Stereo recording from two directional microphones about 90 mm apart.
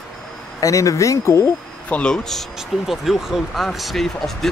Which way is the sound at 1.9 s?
10° left (ahead or behind).